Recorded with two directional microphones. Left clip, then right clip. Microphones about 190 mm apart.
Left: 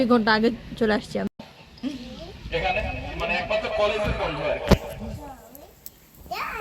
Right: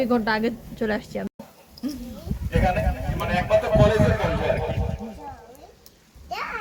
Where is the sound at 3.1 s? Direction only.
20° left (ahead or behind).